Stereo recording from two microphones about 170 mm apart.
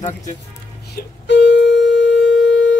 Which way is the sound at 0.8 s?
80° left.